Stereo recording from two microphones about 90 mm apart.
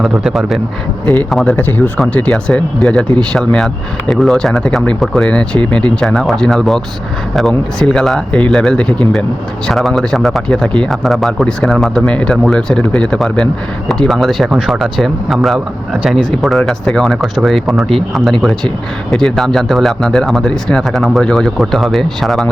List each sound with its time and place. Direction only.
0.0 s speech: 5° right (ahead or behind)
1.5 s speech: 20° left (ahead or behind)
9.6 s speech: 5° left (ahead or behind)